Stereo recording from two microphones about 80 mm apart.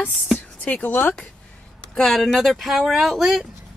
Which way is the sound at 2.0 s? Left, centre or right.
Centre.